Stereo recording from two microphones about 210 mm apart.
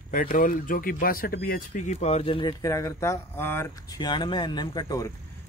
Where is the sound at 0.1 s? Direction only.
40° left (ahead or behind); by 5.0 s 20° left (ahead or behind).